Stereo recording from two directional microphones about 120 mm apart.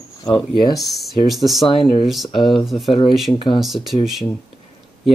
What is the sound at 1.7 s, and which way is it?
Speech, 45° left (ahead or behind).